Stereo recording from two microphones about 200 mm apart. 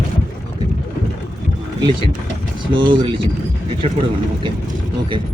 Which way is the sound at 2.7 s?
25° right (ahead or behind).